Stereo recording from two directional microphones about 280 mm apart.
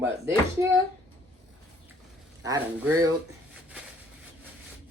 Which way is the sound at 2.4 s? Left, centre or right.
Centre.